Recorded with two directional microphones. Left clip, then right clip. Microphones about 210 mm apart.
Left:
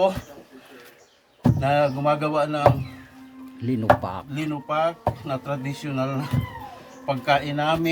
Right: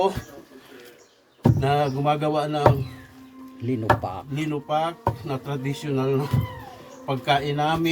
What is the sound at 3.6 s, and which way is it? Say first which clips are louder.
Speech: left 3 dB; 25° left (ahead or behind).